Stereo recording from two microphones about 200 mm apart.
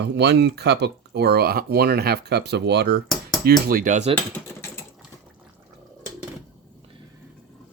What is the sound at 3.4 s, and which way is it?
Speech, 45° right (ahead or behind).